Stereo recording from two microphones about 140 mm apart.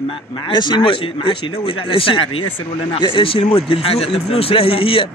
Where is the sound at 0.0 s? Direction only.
40° left (ahead or behind).